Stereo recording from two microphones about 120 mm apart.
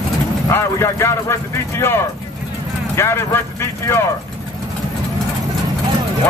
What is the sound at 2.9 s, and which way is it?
Speech, 20° left (ahead or behind).